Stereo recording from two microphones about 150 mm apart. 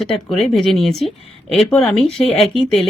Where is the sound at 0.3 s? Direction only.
Centre (ahead or behind).